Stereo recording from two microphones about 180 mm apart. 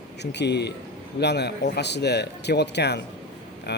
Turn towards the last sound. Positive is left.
turn(degrees=65)  # may be behind; listen again after turning